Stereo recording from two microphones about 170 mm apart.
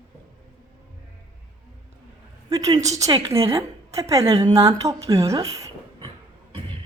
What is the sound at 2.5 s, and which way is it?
A woman's voice, 20° right (ahead or behind).